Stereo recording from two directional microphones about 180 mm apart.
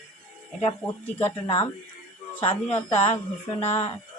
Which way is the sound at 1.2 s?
30° left (ahead or behind).